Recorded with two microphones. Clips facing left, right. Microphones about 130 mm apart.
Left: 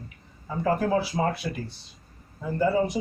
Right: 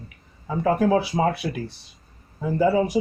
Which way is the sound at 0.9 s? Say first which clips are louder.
Right 4 dB; 80° right.